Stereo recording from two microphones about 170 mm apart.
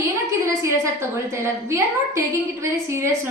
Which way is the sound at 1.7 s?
15° right (ahead or behind).